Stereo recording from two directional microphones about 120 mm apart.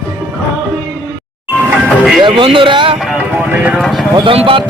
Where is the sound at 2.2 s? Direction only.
40° right (ahead or behind).